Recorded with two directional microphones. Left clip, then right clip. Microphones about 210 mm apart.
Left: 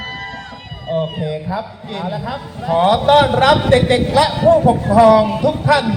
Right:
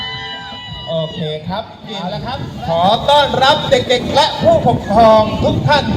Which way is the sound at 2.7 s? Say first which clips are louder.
Even; 55° left (ahead or behind).